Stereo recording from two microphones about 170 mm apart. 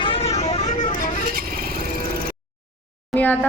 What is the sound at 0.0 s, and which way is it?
Vehicle, 35° left (ahead or behind).